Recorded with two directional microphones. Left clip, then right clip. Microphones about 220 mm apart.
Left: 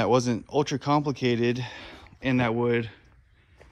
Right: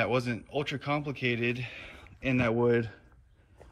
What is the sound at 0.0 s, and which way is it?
Speech, 15° left (ahead or behind).